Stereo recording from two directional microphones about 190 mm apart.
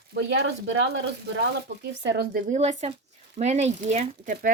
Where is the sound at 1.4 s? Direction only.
65° right (ahead or behind).